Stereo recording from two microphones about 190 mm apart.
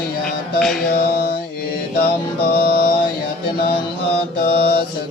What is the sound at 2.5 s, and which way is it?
Music, 55° left (ahead or behind).